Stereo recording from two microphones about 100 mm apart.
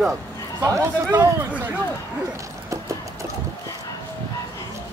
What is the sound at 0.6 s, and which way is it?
Speech, 30° right (ahead or behind).